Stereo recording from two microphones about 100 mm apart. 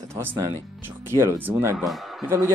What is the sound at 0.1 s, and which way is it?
Speech, 20° right (ahead or behind).